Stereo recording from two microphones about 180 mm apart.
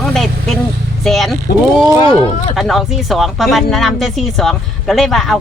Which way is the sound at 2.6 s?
Centre (ahead or behind).